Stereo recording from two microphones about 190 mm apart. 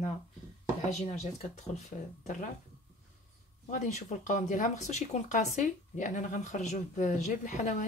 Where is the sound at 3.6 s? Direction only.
40° left (ahead or behind).